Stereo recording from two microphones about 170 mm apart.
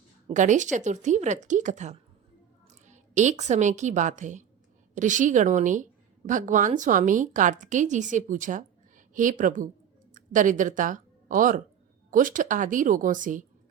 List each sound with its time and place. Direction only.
0.3 s a woman's voice: 45° right (ahead or behind)